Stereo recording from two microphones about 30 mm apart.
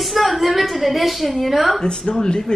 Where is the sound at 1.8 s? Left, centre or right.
Left.